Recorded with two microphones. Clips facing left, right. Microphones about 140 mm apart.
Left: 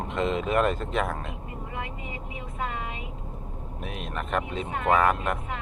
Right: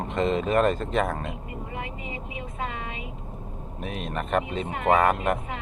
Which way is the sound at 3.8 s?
Centre (ahead or behind).